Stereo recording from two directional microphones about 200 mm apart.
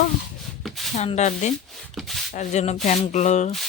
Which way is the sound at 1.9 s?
Centre (ahead or behind).